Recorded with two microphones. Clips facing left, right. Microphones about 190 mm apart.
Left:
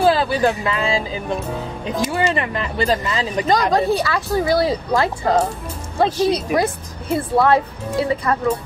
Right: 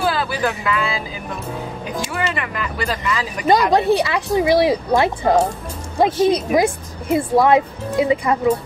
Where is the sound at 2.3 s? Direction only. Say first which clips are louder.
Left 3 dB; 30° left (ahead or behind).